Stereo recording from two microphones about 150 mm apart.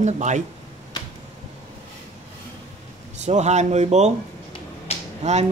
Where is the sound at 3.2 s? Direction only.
50° right (ahead or behind).